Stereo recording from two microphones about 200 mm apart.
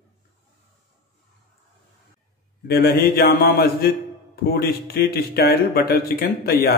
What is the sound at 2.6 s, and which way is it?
Speech, 50° left (ahead or behind).